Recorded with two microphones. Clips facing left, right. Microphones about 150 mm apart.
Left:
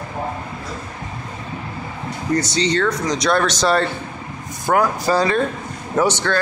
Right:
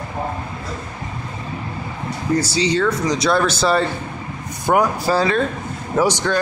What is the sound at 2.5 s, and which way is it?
Speech, 10° right (ahead or behind).